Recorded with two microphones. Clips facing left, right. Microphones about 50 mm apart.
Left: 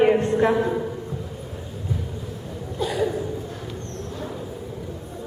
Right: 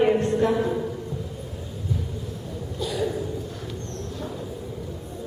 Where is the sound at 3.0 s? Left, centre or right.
Centre.